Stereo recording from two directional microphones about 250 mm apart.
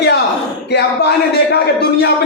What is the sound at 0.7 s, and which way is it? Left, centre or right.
Speech, left.